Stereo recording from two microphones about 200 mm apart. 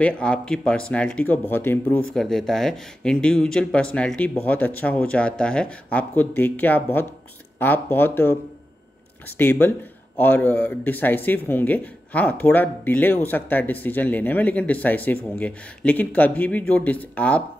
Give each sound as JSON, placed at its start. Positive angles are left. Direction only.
{"t": 0.0, "sound": "speech", "side_deg": 5}
{"t": 9.4, "sound": "speech", "side_deg": 10}